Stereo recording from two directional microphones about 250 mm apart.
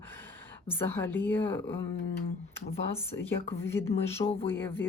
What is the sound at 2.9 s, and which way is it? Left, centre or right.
Speech, centre.